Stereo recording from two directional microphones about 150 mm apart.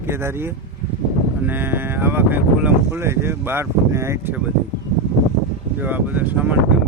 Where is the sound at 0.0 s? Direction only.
15° right (ahead or behind).